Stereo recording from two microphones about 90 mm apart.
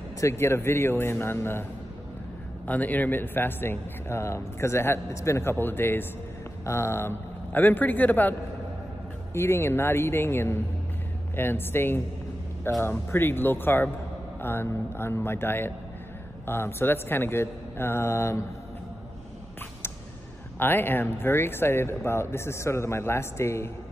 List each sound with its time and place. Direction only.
0.2 s speech: 30° left (ahead or behind)
20.5 s speech: 25° left (ahead or behind)